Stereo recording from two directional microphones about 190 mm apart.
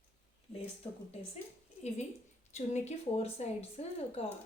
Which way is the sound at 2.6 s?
35° left (ahead or behind).